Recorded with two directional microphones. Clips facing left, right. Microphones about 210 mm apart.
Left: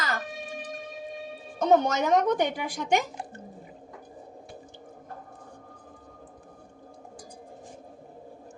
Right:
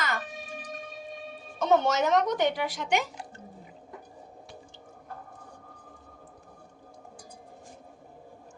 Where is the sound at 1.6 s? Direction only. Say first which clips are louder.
Left 2 dB; 40° left (ahead or behind).